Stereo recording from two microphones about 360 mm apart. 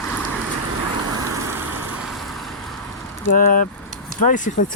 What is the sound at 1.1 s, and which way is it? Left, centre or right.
Vehicle, right.